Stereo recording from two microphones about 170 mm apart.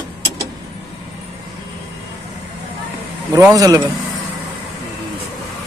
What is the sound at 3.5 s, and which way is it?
Speech, 20° right (ahead or behind).